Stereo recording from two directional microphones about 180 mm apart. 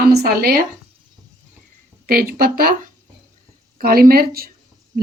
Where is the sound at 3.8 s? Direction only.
55° right (ahead or behind).